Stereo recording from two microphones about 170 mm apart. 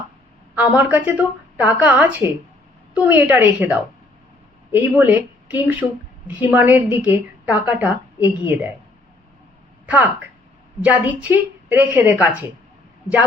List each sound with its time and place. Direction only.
0.5 s a woman's voice: 10° right (ahead or behind)
9.8 s a sound: 10° right (ahead or behind)
10.8 s a woman's voice: 10° right (ahead or behind)